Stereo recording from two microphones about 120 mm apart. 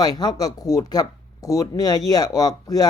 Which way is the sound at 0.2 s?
30° left (ahead or behind).